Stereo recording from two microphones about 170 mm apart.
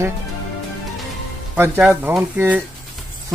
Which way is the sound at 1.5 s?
10° right (ahead or behind).